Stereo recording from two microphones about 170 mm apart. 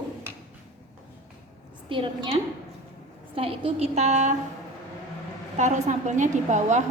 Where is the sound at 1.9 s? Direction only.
30° right (ahead or behind).